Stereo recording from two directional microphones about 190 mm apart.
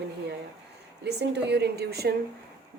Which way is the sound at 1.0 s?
60° right (ahead or behind).